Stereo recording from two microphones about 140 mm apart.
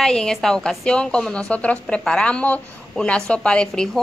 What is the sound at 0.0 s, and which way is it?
A woman's voice, 5° left (ahead or behind).